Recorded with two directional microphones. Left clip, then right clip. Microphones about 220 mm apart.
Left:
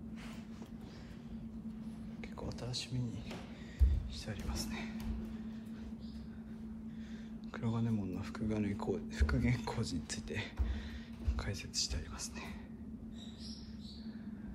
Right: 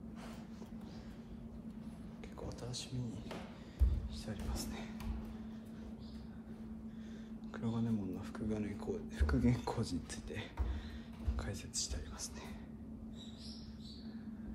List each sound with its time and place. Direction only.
2.4 s speech: 10° right (ahead or behind)
4.3 s speech: 15° right (ahead or behind)
7.5 s speech: 10° right (ahead or behind)
11.3 s speech: 15° right (ahead or behind)